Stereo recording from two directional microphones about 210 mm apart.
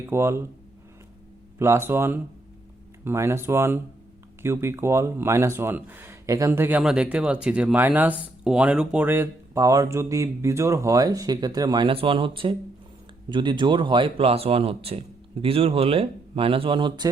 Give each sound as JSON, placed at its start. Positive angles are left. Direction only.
{"t": 0.0, "sound": "speech", "side_deg": -10}
{"t": 1.5, "sound": "speech", "side_deg": -10}